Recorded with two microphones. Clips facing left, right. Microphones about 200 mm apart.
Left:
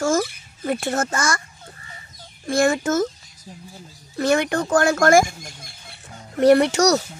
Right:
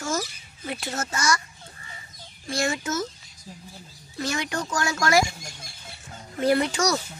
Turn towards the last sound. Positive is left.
turn(degrees=70)  # may be behind; listen again after turning